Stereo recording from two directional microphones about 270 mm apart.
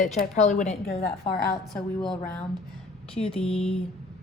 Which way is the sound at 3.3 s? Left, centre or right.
Centre.